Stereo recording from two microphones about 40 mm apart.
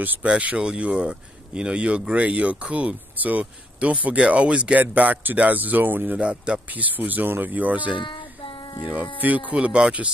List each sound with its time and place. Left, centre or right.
0.2 s speech: right
0.6 s speech: right
4.7 s speech: right
6.1 s speech: right
6.7 s speech: right